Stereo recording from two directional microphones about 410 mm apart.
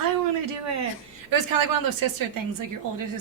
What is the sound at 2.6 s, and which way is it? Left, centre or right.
Speech, right.